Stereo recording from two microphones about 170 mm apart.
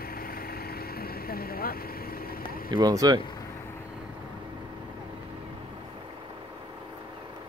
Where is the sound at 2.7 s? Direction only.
25° right (ahead or behind).